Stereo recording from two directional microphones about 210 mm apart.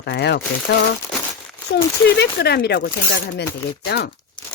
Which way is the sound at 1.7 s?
40° left (ahead or behind).